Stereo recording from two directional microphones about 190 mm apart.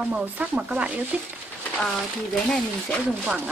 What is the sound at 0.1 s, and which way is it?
Speech, 5° right (ahead or behind).